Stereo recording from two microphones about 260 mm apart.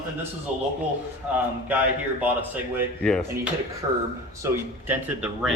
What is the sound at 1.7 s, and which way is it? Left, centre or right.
Speech, centre.